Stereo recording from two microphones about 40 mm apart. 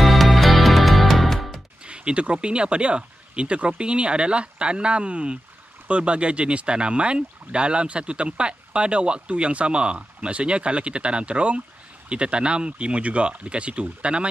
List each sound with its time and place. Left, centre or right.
0.0 s music: centre
1.8 s speech: right